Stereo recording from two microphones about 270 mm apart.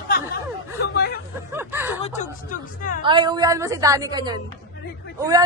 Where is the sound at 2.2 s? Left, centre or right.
Left.